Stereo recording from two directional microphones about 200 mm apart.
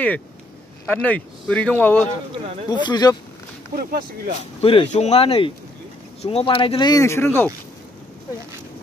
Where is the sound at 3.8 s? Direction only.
50° right (ahead or behind).